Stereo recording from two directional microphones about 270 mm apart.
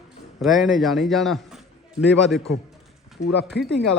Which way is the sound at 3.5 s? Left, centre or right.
Left.